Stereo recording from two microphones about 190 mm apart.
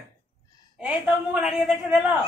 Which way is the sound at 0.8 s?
5° right (ahead or behind).